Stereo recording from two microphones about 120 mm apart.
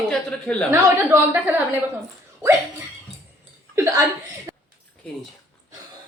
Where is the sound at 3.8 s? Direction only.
25° right (ahead or behind).